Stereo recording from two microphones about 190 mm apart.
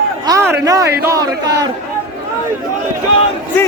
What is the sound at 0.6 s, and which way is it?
Speech, 20° right (ahead or behind).